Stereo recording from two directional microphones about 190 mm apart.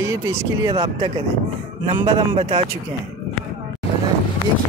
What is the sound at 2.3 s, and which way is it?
Speech, 30° right (ahead or behind).